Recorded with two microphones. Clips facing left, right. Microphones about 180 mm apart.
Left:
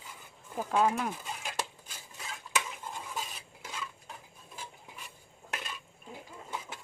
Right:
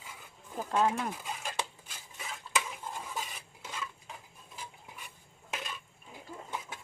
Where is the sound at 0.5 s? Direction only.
10° left (ahead or behind).